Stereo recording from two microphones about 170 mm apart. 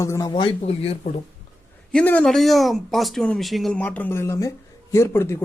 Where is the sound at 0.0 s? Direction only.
20° left (ahead or behind); by 0.9 s 35° left (ahead or behind).